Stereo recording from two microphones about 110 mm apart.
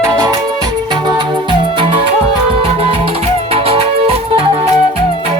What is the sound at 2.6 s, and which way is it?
Music, 60° right (ahead or behind).